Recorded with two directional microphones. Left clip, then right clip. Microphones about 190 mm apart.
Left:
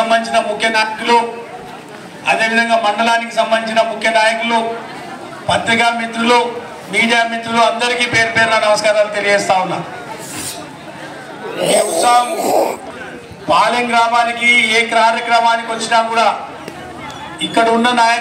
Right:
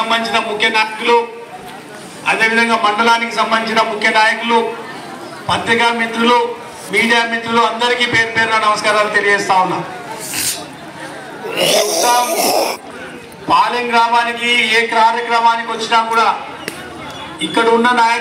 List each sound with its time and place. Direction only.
0.1 s a man's voice: 35° left (ahead or behind)
2.2 s a man's voice: 40° left (ahead or behind)
5.5 s a man's voice: 40° left (ahead or behind)
11.5 s speech: 5° right (ahead or behind)
12.0 s a man's voice: 30° left (ahead or behind)
12.3 s speech: 5° right (ahead or behind)
13.5 s a man's voice: 35° left (ahead or behind)
17.4 s a man's voice: 35° left (ahead or behind)